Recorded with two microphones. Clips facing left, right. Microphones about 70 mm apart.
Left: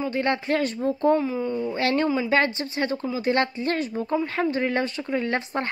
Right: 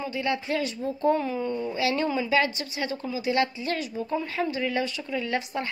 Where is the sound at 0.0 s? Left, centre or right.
Left.